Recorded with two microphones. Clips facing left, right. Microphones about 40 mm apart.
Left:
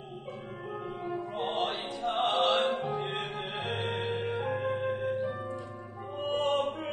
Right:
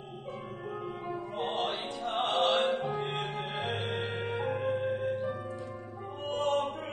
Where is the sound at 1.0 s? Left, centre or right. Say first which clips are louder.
Left 2 dB; centre.